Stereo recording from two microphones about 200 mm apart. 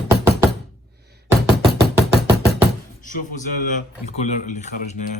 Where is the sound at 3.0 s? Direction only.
40° left (ahead or behind).